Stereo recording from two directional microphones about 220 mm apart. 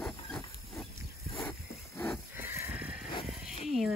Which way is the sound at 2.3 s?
10° right (ahead or behind).